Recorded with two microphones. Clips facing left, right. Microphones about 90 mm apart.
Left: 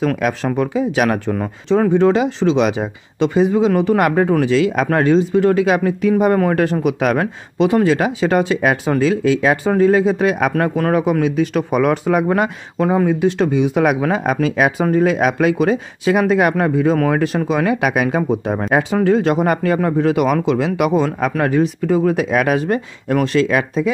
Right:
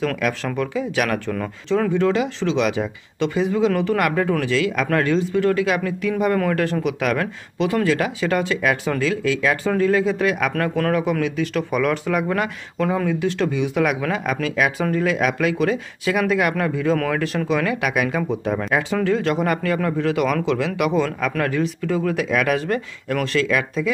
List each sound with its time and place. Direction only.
0.0 s speech: 20° left (ahead or behind)